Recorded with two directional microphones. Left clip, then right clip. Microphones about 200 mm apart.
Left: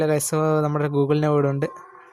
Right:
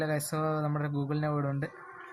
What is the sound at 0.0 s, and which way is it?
Speech, 50° left (ahead or behind).